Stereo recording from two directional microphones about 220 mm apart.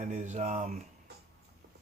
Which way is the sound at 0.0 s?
35° right (ahead or behind).